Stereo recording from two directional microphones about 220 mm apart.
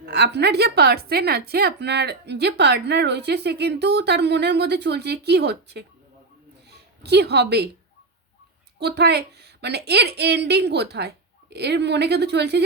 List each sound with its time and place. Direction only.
0.0 s a woman's voice: 50° right (ahead or behind)
8.8 s a woman's voice: 50° right (ahead or behind)